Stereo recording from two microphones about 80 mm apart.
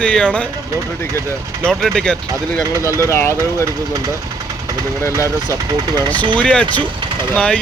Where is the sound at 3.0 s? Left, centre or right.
Left.